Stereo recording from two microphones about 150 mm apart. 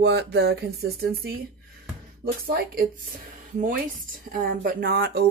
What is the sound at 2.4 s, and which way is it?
Speech, 75° right (ahead or behind).